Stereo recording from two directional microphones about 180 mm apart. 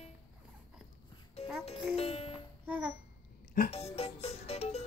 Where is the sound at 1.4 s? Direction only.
35° left (ahead or behind).